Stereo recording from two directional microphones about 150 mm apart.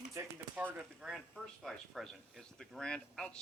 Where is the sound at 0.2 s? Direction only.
20° right (ahead or behind).